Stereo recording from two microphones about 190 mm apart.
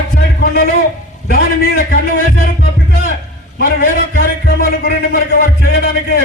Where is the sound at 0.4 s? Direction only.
50° left (ahead or behind).